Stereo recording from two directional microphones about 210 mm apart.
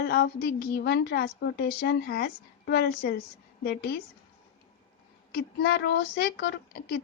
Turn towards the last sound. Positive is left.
turn(degrees=50)  # may be behind; listen again after turning